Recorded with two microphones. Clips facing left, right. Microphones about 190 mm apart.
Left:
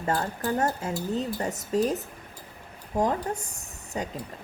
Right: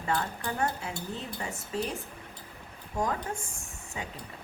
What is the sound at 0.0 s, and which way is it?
Speech, 40° left (ahead or behind).